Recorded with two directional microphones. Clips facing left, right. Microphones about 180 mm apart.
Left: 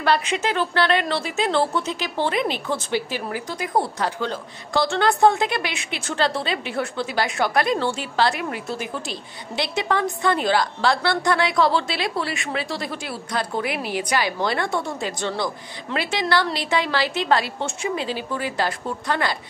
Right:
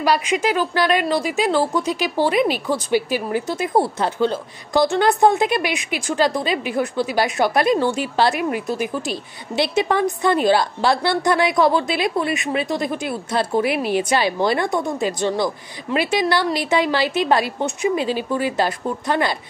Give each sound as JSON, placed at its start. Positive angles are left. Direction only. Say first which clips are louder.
{"t": 0.0, "sound": "a woman's voice", "louder": "right 3 dB", "side_deg": -10}
{"t": 3.3, "sound": "a woman's voice", "louder": "right 6 dB", "side_deg": -25}